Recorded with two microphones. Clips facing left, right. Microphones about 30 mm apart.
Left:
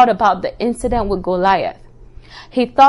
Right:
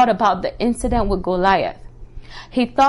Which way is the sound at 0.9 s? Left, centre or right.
Centre.